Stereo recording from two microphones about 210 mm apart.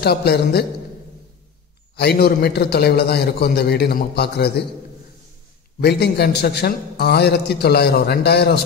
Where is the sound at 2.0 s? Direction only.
50° left (ahead or behind).